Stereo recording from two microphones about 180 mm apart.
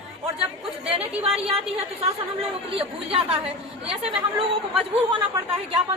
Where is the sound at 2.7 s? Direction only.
30° right (ahead or behind).